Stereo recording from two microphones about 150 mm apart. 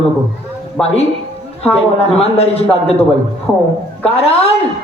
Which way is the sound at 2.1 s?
40° left (ahead or behind).